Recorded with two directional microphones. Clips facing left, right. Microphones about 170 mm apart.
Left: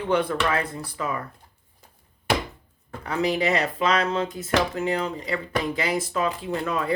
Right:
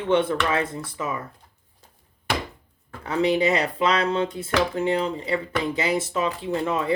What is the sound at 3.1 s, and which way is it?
Speech, 25° right (ahead or behind).